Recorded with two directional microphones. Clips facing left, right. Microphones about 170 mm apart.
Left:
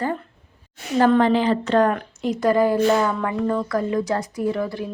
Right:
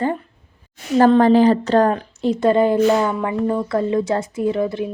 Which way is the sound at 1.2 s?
40° right (ahead or behind).